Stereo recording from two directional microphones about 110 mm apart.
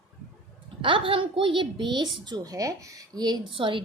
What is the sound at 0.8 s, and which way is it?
A woman's voice, 50° right (ahead or behind).